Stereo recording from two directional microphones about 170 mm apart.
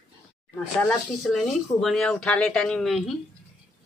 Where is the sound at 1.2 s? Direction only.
Centre (ahead or behind).